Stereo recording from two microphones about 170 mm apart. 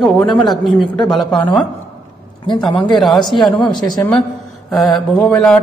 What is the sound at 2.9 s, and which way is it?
A woman's voice, centre (ahead or behind).